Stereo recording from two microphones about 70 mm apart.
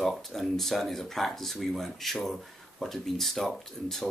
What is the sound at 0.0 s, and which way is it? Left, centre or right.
Speech, centre.